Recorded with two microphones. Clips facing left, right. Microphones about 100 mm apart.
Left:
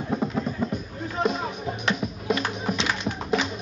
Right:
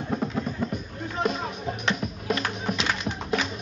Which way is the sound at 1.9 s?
5° left (ahead or behind).